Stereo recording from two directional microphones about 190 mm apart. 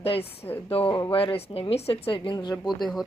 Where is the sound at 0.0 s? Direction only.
30° left (ahead or behind).